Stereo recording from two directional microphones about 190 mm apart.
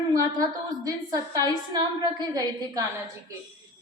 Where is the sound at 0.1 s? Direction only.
20° right (ahead or behind).